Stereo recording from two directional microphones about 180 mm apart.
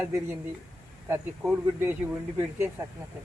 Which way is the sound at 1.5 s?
10° right (ahead or behind).